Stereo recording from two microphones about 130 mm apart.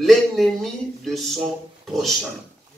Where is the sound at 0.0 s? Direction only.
Centre (ahead or behind).